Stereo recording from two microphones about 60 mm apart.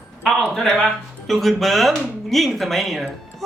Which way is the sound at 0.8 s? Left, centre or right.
Centre.